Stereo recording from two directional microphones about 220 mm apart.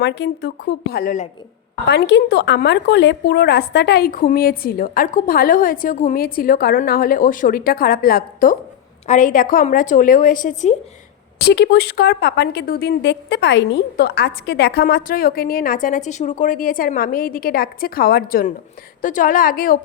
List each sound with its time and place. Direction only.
0.0 s speech: 50° left (ahead or behind)
1.9 s a woman's voice: 50° left (ahead or behind); by 10.8 s 35° left (ahead or behind)
11.3 s a woman's voice: 50° left (ahead or behind)